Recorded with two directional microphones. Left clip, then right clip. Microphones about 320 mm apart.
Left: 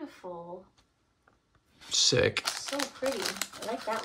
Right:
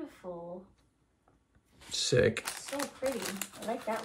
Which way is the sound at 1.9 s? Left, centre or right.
Centre.